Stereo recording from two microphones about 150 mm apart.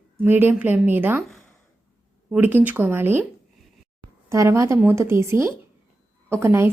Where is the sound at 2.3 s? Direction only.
10° right (ahead or behind).